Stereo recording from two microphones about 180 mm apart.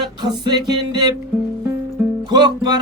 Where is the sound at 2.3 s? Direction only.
25° right (ahead or behind).